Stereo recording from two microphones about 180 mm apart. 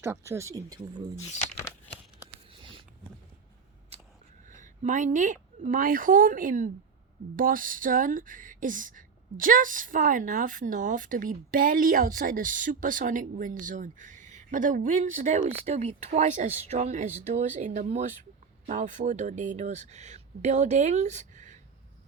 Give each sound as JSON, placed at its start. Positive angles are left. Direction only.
{"t": 0.3, "sound": "speech", "side_deg": -15}
{"t": 2.5, "sound": "a sound", "side_deg": -30}
{"t": 4.4, "sound": "speech", "side_deg": -45}